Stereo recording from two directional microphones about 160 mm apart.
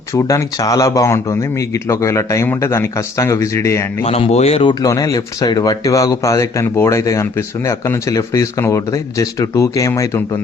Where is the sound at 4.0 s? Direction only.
40° left (ahead or behind).